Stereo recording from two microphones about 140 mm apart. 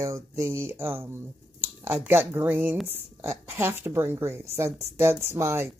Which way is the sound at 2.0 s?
15° right (ahead or behind).